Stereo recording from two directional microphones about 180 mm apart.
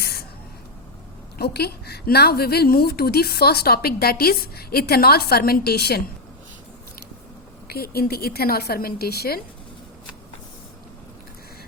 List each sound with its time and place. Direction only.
0.0 s spray: 60° left (ahead or behind)
1.4 s a woman's voice: 65° left (ahead or behind)
7.7 s a woman's voice: 60° left (ahead or behind)